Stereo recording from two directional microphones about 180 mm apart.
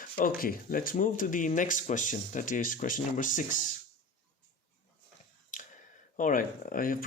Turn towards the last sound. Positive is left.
turn(degrees=50)  # may be behind; listen again after turning